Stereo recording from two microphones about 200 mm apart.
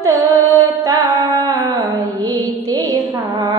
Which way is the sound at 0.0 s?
15° right (ahead or behind).